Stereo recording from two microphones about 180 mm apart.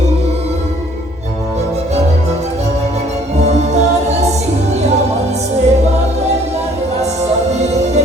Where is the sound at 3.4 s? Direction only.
40° right (ahead or behind).